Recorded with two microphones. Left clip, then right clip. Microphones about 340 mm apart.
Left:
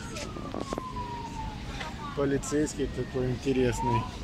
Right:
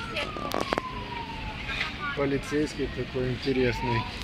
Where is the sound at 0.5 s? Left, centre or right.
Right.